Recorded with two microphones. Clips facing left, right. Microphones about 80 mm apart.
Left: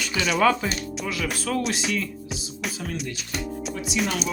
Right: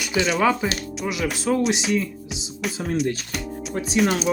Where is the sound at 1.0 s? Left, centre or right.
Centre.